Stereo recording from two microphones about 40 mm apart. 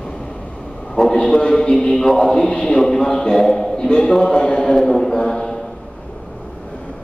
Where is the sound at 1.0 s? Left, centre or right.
Centre.